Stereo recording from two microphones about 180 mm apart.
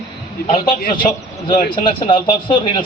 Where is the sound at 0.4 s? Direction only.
50° left (ahead or behind).